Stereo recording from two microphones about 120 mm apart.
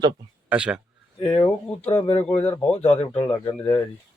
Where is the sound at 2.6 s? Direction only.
10° left (ahead or behind).